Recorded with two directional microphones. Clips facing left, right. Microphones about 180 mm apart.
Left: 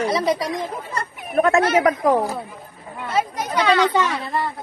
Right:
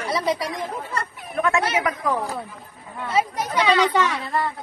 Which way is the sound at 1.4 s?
40° left (ahead or behind).